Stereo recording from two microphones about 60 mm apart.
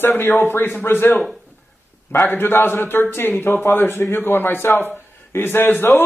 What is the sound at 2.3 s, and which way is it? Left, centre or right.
A man's voice, left.